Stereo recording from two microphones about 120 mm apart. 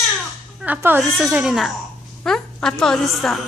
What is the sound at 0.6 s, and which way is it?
Speech, 15° right (ahead or behind).